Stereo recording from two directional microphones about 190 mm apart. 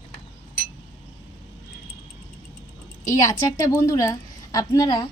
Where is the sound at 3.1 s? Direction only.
20° left (ahead or behind).